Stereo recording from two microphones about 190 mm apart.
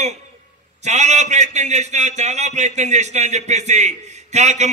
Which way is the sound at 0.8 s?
35° right (ahead or behind).